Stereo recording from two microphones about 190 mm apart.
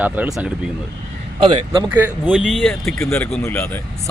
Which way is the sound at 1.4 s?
25° right (ahead or behind).